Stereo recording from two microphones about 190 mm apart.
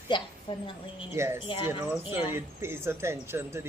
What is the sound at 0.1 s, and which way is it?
Speech, 25° left (ahead or behind).